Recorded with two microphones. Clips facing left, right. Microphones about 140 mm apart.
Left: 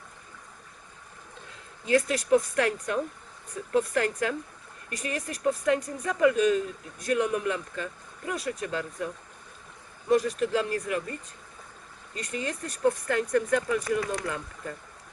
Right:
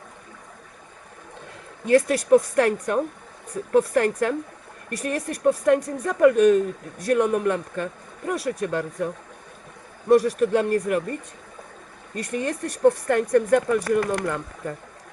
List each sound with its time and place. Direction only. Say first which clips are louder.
1.8 s a man's voice: right 6 dB; 55° right (ahead or behind)
12.1 s speech: right 6 dB; 55° right (ahead or behind)